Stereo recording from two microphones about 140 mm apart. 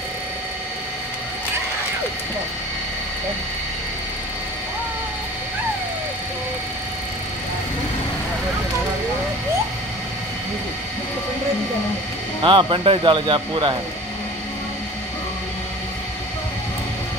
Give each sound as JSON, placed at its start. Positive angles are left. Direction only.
{"t": 12.4, "sound": "speech", "side_deg": -35}